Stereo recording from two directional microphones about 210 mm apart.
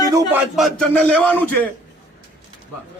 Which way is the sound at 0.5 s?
Centre (ahead or behind).